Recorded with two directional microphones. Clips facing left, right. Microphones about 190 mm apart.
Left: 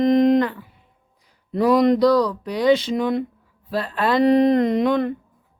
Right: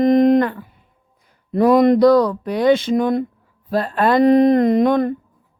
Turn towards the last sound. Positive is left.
turn(degrees=-45)  # may be behind; listen again after turning